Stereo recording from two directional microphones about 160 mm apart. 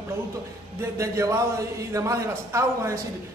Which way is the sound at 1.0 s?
20° right (ahead or behind).